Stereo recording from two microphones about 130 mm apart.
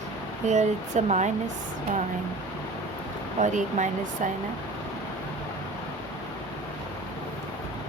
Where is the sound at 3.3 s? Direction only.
70° right (ahead or behind).